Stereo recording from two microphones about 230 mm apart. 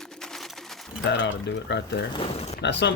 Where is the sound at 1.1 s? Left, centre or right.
Left.